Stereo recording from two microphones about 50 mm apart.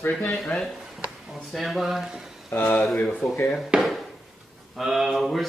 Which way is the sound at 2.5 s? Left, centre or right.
Left.